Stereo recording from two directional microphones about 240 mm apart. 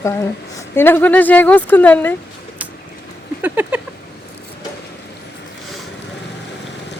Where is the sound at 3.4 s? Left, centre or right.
Centre.